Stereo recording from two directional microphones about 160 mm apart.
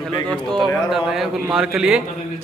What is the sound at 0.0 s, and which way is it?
A man's voice, 5° left (ahead or behind).